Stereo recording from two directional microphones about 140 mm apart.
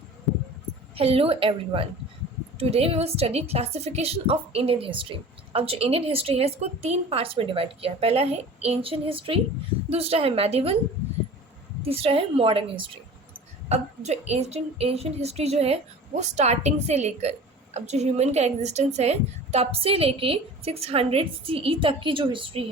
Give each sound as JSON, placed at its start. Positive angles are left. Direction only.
{"t": 0.9, "sound": "a woman's voice", "side_deg": -45}
{"t": 11.8, "sound": "a woman's voice", "side_deg": -45}
{"t": 13.7, "sound": "a woman's voice", "side_deg": -50}